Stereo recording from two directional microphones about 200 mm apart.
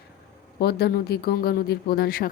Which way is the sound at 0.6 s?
50° left (ahead or behind).